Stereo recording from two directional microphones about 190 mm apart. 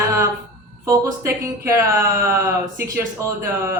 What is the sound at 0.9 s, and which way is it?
Speech, 15° right (ahead or behind).